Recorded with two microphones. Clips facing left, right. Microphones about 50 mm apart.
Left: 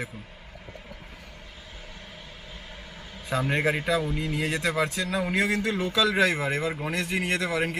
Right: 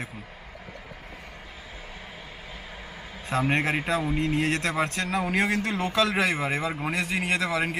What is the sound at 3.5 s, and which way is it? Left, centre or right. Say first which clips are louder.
Speech: left 2 dB; right.